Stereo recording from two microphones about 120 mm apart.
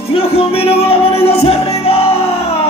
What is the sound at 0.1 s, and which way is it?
Music, 55° left (ahead or behind).